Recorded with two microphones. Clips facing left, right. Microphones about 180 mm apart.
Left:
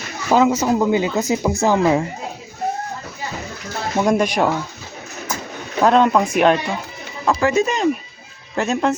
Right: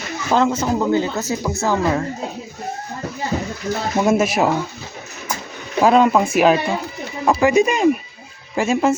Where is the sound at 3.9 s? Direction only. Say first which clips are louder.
Even; 5° right (ahead or behind).